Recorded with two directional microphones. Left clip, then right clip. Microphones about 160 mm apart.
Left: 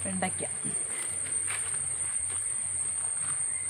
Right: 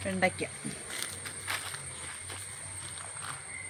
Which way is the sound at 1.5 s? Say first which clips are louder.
Right 1 dB; 90° right.